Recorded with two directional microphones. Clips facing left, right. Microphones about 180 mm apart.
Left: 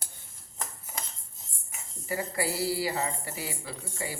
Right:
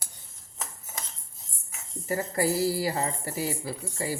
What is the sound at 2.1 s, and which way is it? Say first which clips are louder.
Speech: right 4 dB; 45° right (ahead or behind).